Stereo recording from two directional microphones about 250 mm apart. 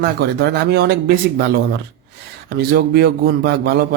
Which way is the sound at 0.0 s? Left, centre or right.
Right.